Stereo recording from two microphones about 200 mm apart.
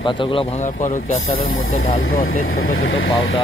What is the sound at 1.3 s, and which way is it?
Speech, 90° left.